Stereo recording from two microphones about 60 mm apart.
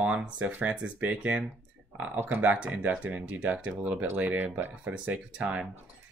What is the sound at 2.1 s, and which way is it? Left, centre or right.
Speech, right.